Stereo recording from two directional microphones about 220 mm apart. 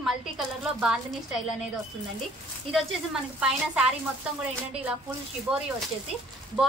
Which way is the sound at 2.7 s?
Centre (ahead or behind).